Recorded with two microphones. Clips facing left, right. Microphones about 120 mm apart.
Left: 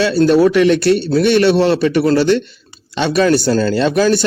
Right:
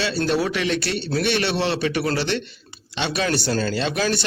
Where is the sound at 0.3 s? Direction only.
50° left (ahead or behind).